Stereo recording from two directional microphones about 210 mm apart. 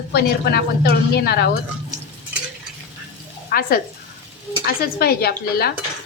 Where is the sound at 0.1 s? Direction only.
50° left (ahead or behind).